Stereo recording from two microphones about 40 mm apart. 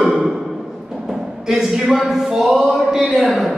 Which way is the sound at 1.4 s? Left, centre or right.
Centre.